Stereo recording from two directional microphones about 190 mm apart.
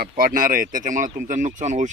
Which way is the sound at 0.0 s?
50° right (ahead or behind).